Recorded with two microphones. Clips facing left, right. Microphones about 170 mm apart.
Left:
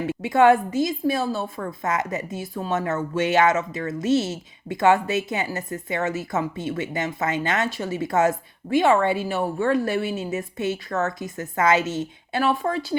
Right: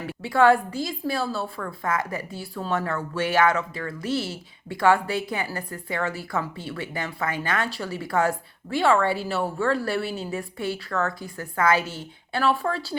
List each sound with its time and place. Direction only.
0.1 s a woman's voice: 20° left (ahead or behind)